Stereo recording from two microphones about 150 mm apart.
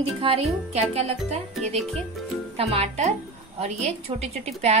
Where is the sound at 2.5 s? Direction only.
40° right (ahead or behind).